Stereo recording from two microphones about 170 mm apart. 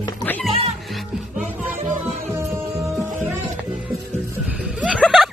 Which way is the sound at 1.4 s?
10° right (ahead or behind).